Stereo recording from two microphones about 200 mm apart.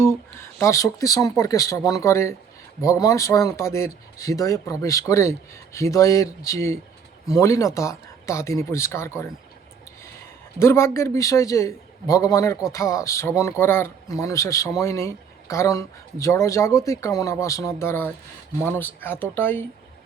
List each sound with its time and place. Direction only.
0.0 s speech: 10° left (ahead or behind)
10.6 s speech: 15° left (ahead or behind)